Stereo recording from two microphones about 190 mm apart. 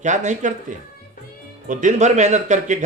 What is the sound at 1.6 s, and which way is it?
A man's voice, 40° right (ahead or behind).